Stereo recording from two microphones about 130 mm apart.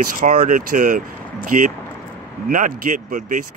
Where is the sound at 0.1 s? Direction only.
90° right.